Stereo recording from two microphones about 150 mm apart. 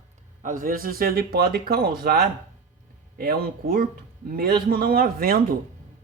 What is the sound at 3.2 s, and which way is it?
A man's voice, 80° right.